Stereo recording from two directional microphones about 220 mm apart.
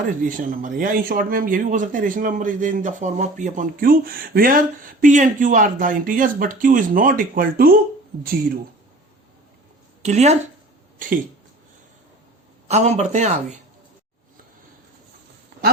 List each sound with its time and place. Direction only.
0.0 s a man's voice: 35° right (ahead or behind)
10.0 s a man's voice: 30° right (ahead or behind)
12.6 s a man's voice: 30° right (ahead or behind)